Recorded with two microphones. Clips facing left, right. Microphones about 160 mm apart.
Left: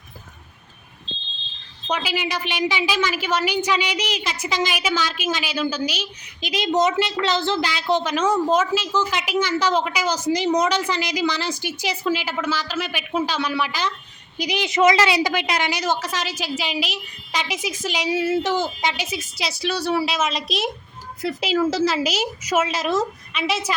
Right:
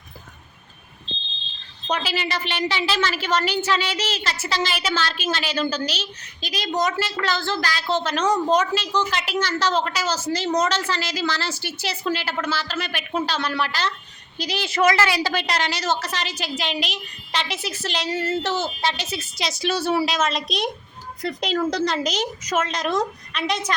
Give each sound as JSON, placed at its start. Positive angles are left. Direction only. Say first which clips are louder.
{"t": 1.9, "sound": "a woman's voice", "louder": "left 1 dB", "side_deg": 10}
{"t": 6.7, "sound": "a woman's voice", "louder": "left 4 dB", "side_deg": 20}
{"t": 15.3, "sound": "a woman's voice", "louder": "left 1 dB", "side_deg": 10}